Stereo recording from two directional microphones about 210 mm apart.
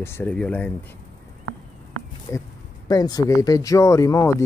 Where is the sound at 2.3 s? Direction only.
15° left (ahead or behind).